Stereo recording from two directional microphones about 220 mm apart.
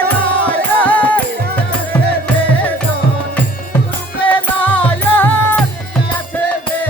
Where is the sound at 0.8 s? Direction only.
5° left (ahead or behind).